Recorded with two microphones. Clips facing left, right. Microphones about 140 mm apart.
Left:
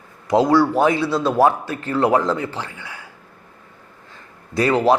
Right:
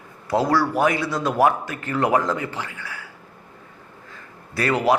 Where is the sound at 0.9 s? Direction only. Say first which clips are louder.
Left 3 dB; 15° right (ahead or behind).